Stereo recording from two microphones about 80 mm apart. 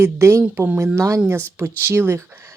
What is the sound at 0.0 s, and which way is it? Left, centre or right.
Speech, right.